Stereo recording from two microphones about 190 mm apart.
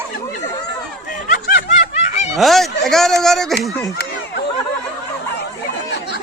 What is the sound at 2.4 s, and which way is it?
Speech, centre (ahead or behind).